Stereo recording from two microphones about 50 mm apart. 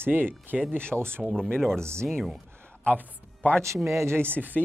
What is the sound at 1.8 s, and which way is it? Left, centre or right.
Speech, right.